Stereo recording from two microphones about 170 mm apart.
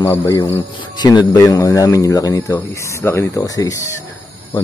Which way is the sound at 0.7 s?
25° left (ahead or behind).